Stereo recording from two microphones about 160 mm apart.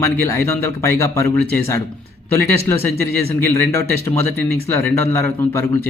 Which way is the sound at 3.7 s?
15° left (ahead or behind).